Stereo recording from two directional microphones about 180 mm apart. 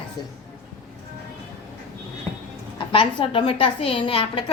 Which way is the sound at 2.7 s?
30° left (ahead or behind).